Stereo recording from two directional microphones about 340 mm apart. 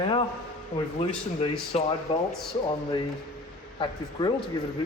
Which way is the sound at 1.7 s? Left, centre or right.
Centre.